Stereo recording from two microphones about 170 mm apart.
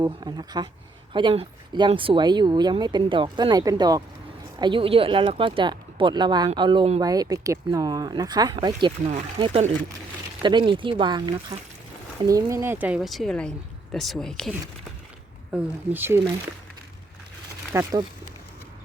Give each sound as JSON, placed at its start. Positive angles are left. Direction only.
{"t": 0.0, "sound": "speech", "side_deg": -25}
{"t": 7.0, "sound": "speech", "side_deg": -20}
{"t": 15.5, "sound": "speech", "side_deg": -10}
{"t": 17.7, "sound": "speech", "side_deg": -20}